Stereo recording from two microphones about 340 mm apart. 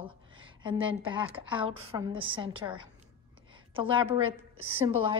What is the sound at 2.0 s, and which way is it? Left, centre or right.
A woman's voice, centre.